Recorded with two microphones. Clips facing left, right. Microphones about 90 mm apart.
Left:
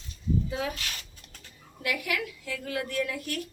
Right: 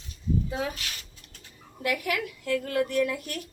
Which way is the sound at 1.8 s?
40° right (ahead or behind).